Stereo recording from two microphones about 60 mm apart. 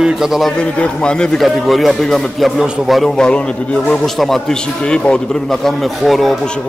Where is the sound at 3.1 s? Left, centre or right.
Centre.